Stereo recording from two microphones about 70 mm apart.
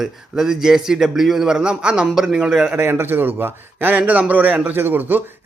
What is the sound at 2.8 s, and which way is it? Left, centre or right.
A man's voice, right.